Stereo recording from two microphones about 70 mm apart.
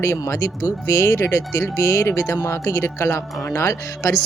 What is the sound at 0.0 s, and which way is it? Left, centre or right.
Speech, left.